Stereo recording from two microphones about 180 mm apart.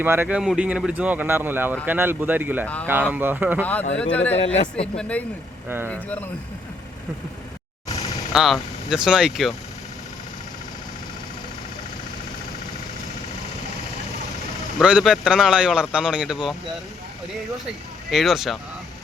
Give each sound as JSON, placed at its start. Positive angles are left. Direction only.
{"t": 0.0, "sound": "speech", "side_deg": -10}
{"t": 3.6, "sound": "speech", "side_deg": 10}
{"t": 4.4, "sound": "speech", "side_deg": 35}
{"t": 4.9, "sound": "speech", "side_deg": 5}
{"t": 5.6, "sound": "speech", "side_deg": -10}
{"t": 5.9, "sound": "speech", "side_deg": 10}
{"t": 8.3, "sound": "a man's voice", "side_deg": 0}
{"t": 14.8, "sound": "a man's voice", "side_deg": -5}
{"t": 18.1, "sound": "a man's voice", "side_deg": 0}